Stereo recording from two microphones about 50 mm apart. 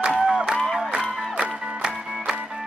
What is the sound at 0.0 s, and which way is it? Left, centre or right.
Music, centre.